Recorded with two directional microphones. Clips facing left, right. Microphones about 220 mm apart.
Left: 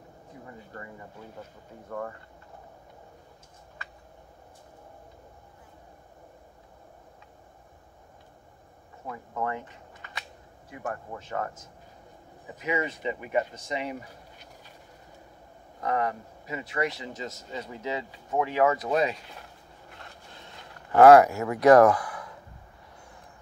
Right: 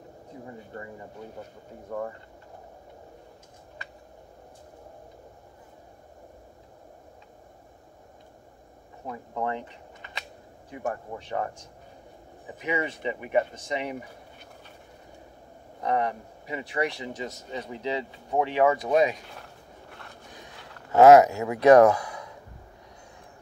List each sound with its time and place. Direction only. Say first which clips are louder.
0.5 s a sound: right 3 dB; 25° right (ahead or behind)
1.9 s speech: right 2 dB; 15° right (ahead or behind)
9.0 s speech: right 1 dB; 20° right (ahead or behind)
10.7 s speech: right 3 dB; 20° right (ahead or behind)
15.8 s speech: right 1 dB; 20° right (ahead or behind)
20.2 s a sound: right 2 dB; 15° right (ahead or behind)